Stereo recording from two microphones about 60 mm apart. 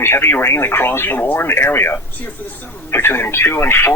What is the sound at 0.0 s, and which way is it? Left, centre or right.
Speech, left.